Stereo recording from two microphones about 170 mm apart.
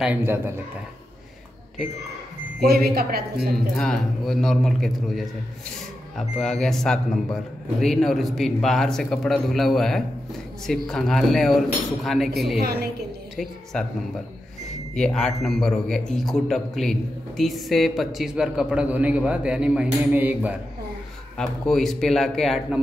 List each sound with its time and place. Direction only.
0.0 s a man's voice: 10° right (ahead or behind)
2.6 s speech: 65° right (ahead or behind)
3.7 s a man's voice: 5° left (ahead or behind)
13.7 s a man's voice: 5° left (ahead or behind)
15.0 s a man's voice: 5° left (ahead or behind)
21.4 s a man's voice: 5° left (ahead or behind)